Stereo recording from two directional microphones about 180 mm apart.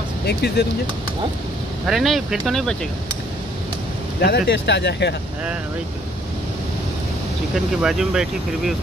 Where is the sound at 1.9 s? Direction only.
Centre (ahead or behind).